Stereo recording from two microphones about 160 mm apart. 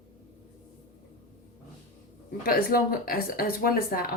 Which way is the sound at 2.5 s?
70° left (ahead or behind).